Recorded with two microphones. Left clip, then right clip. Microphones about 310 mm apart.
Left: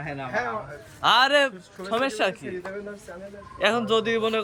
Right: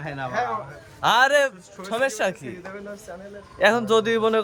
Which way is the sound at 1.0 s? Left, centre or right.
Centre.